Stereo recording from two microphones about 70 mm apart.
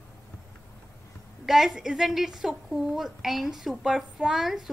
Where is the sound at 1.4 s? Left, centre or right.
Centre.